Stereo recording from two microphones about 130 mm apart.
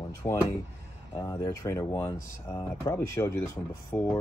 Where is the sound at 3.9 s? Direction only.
10° left (ahead or behind).